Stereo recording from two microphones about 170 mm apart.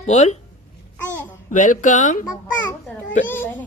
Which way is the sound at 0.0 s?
40° left (ahead or behind).